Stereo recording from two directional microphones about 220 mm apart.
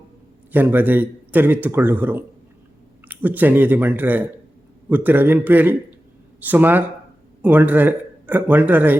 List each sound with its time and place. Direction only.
0.5 s a man's voice: 10° right (ahead or behind)